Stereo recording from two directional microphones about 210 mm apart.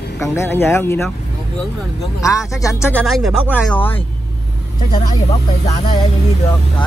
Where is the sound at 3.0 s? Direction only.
Centre (ahead or behind).